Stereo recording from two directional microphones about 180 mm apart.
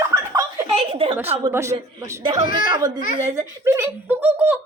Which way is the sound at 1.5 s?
15° right (ahead or behind).